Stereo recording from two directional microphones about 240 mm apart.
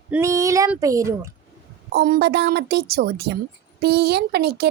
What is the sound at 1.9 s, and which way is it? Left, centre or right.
Speech, right.